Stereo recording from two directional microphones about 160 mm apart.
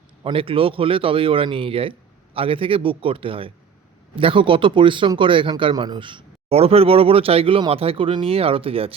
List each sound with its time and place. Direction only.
0.2 s speech: 30° right (ahead or behind)